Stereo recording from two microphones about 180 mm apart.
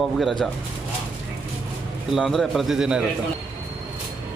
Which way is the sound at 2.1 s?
Centre (ahead or behind).